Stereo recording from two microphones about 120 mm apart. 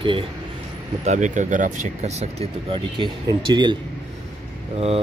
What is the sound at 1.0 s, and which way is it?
Speech, 85° right.